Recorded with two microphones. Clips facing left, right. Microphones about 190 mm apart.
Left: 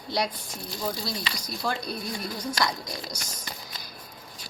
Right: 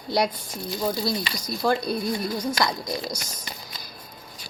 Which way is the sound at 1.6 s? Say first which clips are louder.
Right 8 dB; 50° right (ahead or behind).